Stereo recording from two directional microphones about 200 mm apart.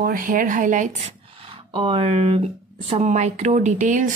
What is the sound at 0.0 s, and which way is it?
Speech, 45° right (ahead or behind).